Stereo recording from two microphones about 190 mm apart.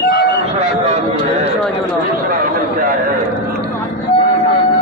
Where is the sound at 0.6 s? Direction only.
35° right (ahead or behind).